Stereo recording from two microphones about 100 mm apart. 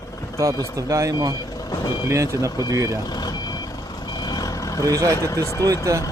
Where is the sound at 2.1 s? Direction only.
30° right (ahead or behind).